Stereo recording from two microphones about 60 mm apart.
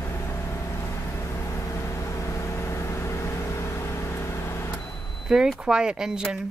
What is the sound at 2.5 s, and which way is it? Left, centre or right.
Vehicle, left.